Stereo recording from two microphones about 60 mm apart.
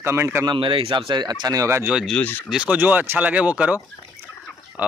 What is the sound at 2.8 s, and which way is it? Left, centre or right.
Speech, right.